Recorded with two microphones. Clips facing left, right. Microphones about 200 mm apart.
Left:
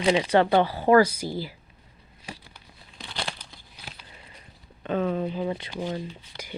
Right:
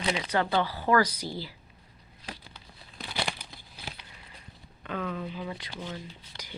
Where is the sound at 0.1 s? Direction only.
30° left (ahead or behind).